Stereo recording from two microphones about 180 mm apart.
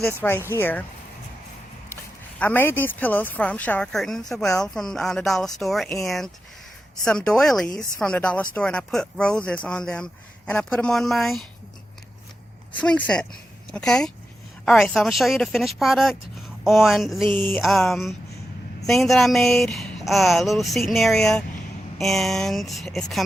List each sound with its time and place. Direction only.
0.2 s a woman's voice: 10° left (ahead or behind)
2.4 s a woman's voice: 10° left (ahead or behind)
12.7 s speech: 5° left (ahead or behind)
17.3 s a woman's voice: 10° left (ahead or behind)